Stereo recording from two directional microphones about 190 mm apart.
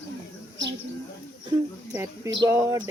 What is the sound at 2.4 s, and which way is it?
Speech, 15° right (ahead or behind).